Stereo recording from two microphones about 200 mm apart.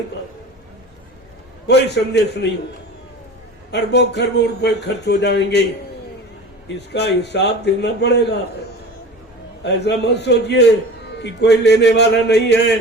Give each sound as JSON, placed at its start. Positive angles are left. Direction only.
{"t": 1.6, "sound": "speech", "side_deg": 55}
{"t": 3.7, "sound": "speech", "side_deg": 60}
{"t": 6.7, "sound": "speech", "side_deg": 55}
{"t": 9.6, "sound": "speech", "side_deg": 55}